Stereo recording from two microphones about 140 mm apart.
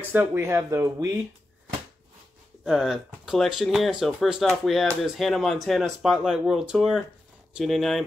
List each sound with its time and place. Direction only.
0.1 s speech: 15° right (ahead or behind)
2.6 s speech: 5° right (ahead or behind)